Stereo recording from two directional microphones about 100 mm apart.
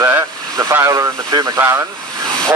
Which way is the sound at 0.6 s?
30° right (ahead or behind).